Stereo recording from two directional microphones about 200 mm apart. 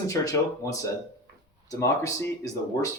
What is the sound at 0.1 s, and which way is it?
Speech, 15° left (ahead or behind).